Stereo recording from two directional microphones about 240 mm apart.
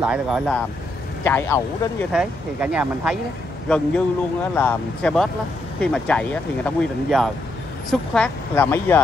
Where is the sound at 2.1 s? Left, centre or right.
Centre.